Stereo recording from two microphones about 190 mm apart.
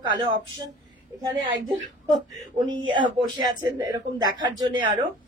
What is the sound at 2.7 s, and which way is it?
Speech, 90° right.